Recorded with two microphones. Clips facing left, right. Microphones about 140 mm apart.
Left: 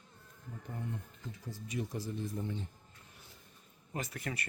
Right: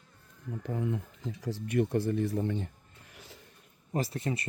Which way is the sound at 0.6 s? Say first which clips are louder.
Right 10 dB; 90° right.